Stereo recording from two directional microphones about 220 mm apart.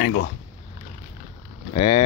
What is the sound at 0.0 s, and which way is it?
Speech, 50° left (ahead or behind).